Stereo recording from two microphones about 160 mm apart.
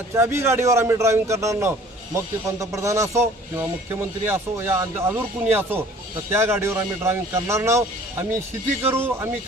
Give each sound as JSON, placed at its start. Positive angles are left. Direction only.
{"t": 0.1, "sound": "speech", "side_deg": -15}
{"t": 4.3, "sound": "speech", "side_deg": -15}